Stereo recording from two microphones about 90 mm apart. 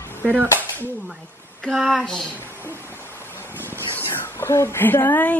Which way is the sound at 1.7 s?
Centre (ahead or behind).